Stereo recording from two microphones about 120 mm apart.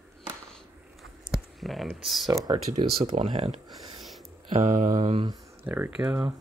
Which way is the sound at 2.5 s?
55° right (ahead or behind).